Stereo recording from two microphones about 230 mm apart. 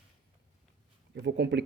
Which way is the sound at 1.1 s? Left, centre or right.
Right.